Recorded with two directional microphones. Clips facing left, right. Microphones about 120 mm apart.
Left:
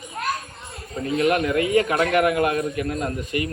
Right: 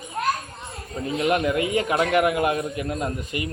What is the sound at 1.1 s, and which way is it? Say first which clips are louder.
A man's voice: left 2 dB; 20° right (ahead or behind).